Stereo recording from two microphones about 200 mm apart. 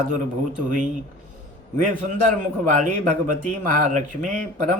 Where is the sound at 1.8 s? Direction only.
40° right (ahead or behind).